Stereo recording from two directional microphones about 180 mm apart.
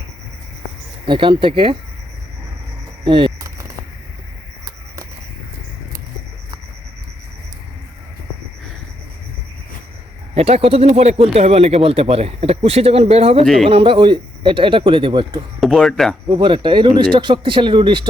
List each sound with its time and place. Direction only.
1.0 s speech: 25° right (ahead or behind)
3.0 s a sound: 30° right (ahead or behind)
10.3 s speech: 35° right (ahead or behind)
13.4 s speech: centre (ahead or behind)
13.7 s speech: 30° right (ahead or behind)
15.6 s speech: centre (ahead or behind)
16.3 s speech: 25° right (ahead or behind)